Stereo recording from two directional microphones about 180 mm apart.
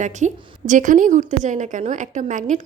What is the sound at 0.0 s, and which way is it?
A woman's voice, 40° right (ahead or behind).